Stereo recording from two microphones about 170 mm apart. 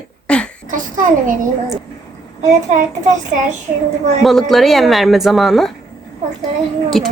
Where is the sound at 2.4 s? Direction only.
45° right (ahead or behind).